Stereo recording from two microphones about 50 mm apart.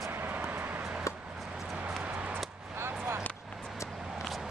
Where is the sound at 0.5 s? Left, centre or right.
Right.